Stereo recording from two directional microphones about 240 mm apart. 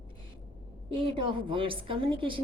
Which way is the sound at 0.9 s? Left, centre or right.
Right.